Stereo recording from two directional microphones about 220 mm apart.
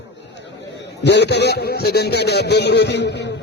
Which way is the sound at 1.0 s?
50° left (ahead or behind).